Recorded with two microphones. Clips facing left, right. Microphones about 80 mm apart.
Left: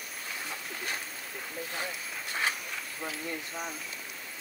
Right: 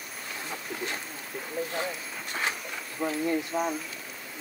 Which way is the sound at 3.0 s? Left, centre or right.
Centre.